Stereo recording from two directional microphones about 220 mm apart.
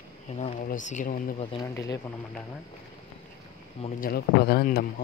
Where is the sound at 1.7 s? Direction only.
15° left (ahead or behind).